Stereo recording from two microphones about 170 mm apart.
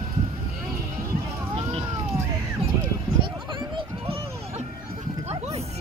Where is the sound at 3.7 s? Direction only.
35° right (ahead or behind).